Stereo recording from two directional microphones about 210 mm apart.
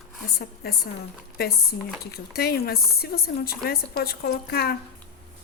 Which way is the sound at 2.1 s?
50° left (ahead or behind).